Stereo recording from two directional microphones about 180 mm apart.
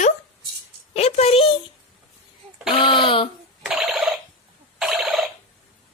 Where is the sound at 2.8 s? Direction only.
30° left (ahead or behind).